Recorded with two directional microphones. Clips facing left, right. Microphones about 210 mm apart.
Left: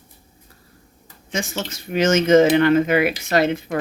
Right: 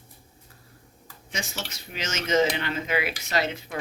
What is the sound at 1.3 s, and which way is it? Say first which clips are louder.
Speech: left 9 dB; 50° left (ahead or behind).